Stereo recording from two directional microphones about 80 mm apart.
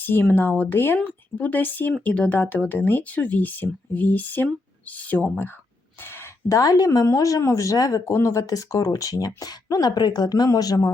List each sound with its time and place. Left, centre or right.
0.0 s speech: left
6.0 s a sound: left
6.5 s speech: left